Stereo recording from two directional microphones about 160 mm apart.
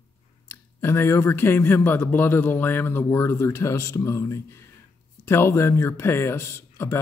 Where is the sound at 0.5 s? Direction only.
15° left (ahead or behind).